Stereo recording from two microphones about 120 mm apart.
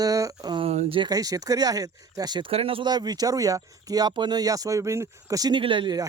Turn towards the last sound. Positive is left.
turn(degrees=-35)  # may be behind; listen again after turning